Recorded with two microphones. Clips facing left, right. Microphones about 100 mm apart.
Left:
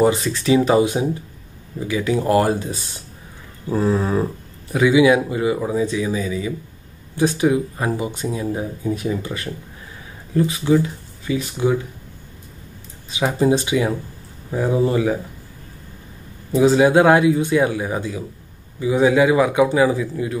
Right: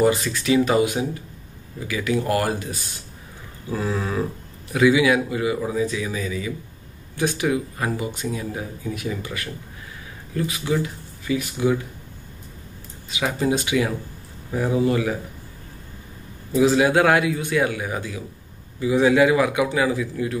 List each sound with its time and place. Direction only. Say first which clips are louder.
0.0 s speech: left 2 dB; 30° left (ahead or behind)
3.7 s a sound: left 6 dB; 30° left (ahead or behind)
4.7 s speech: left 3 dB; 20° left (ahead or behind)
13.3 s speech: left 4 dB; 25° left (ahead or behind)
16.5 s speech: left 4 dB; 25° left (ahead or behind)